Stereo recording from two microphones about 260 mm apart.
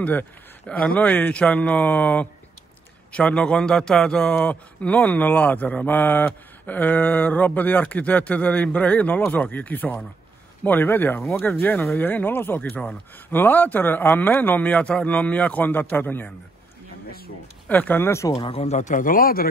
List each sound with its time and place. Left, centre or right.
0.0 s a man's voice: centre
17.6 s speech: centre; by 19.5 s left